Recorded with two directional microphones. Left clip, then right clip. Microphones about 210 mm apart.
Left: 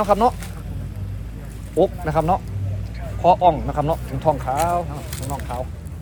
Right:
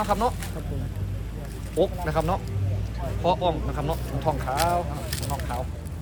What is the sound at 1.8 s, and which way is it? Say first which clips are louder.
Speech: left 5 dB; 30° left (ahead or behind).